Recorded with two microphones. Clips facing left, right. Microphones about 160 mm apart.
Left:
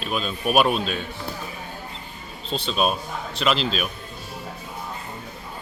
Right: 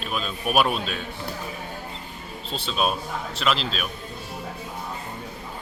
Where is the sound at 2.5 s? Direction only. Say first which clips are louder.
Left 2 dB; 5° right (ahead or behind).